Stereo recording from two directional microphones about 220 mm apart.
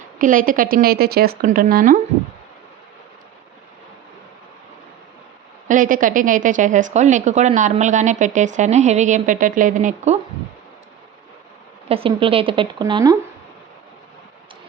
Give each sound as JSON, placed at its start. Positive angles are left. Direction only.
{"t": 0.2, "sound": "a woman's voice", "side_deg": -40}
{"t": 5.6, "sound": "a woman's voice", "side_deg": -35}
{"t": 11.9, "sound": "speech", "side_deg": -25}